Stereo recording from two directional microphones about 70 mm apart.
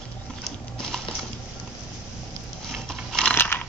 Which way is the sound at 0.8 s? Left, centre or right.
Centre.